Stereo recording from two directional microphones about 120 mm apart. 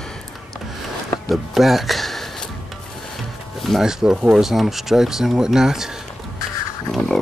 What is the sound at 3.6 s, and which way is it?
Speech, centre (ahead or behind).